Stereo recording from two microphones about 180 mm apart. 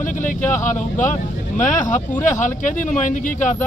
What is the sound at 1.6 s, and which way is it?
Speech, 45° left (ahead or behind).